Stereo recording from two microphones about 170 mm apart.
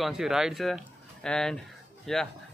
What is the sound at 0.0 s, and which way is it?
Speech, 5° right (ahead or behind).